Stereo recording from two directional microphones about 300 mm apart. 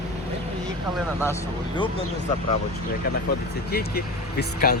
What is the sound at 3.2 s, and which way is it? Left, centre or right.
Speech, left.